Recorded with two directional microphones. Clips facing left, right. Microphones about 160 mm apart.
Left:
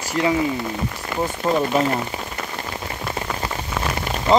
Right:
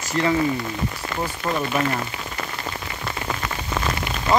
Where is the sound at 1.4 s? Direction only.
20° left (ahead or behind).